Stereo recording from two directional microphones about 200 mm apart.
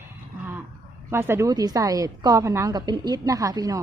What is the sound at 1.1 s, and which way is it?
Speech, 15° right (ahead or behind).